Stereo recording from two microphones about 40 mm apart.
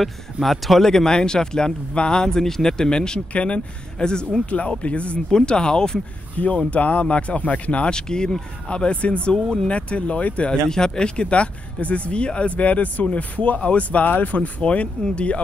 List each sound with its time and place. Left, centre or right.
0.0 s speech: centre
0.8 s speech: centre
3.3 s speech: left
4.0 s speech: left
4.5 s speech: left
5.3 s speech: left
6.4 s speech: left
7.9 s speech: centre
9.3 s speech: centre
9.7 s speech: left
10.7 s speech: centre; by 14.5 s left
14.6 s speech: left